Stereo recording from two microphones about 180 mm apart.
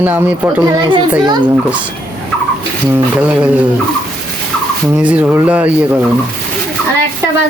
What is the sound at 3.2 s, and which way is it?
Speech, 10° right (ahead or behind).